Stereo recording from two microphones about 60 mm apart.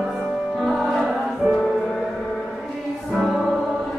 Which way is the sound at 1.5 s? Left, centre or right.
Centre.